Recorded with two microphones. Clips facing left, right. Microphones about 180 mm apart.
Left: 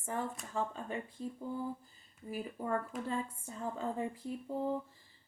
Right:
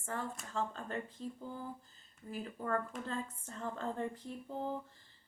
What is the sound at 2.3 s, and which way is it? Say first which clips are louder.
Speech: left 1 dB; 10° left (ahead or behind).